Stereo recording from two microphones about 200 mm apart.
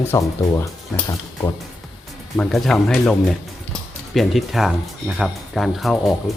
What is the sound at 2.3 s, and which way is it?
Speech, centre (ahead or behind).